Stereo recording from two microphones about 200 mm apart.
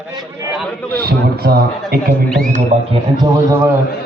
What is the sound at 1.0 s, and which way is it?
A man's voice, 50° right (ahead or behind).